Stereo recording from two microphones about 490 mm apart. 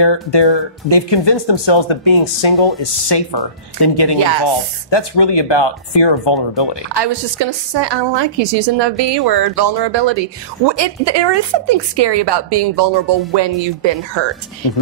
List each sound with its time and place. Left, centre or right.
0.0 s speech: left
3.1 s speech: left
6.9 s a woman's voice: right